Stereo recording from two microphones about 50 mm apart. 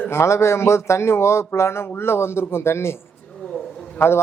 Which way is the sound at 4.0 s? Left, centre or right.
Left.